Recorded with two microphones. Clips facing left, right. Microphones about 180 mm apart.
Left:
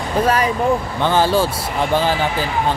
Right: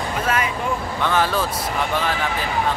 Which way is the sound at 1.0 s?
30° left (ahead or behind).